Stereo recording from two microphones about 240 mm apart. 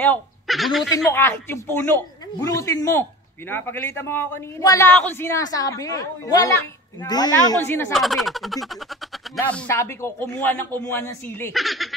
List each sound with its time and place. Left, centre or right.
0.0 s a man's voice: centre